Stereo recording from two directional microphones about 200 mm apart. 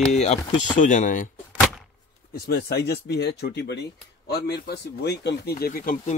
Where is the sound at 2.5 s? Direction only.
55° left (ahead or behind).